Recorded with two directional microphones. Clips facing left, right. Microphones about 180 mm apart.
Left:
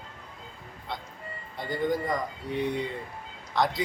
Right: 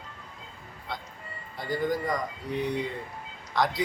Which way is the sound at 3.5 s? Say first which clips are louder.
Even; centre (ahead or behind).